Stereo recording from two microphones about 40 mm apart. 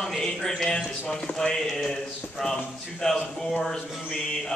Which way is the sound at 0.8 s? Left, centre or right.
Centre.